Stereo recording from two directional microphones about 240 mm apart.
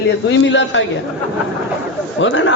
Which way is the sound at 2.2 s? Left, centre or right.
Left.